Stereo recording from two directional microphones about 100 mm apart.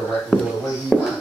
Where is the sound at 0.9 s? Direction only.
5° left (ahead or behind).